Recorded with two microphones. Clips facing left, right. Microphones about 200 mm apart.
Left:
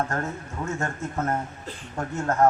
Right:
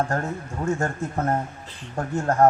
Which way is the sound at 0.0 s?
30° right (ahead or behind).